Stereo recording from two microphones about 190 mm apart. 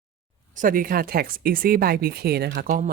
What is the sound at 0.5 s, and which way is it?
Speech, 45° right (ahead or behind).